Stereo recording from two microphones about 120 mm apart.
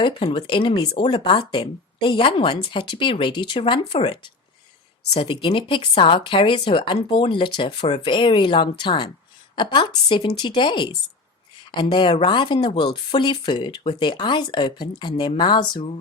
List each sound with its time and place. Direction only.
0.0 s speech: 45° left (ahead or behind)